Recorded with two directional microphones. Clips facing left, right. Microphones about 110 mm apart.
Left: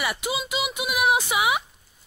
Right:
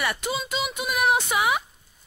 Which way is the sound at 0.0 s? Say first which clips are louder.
Even; 5° left (ahead or behind).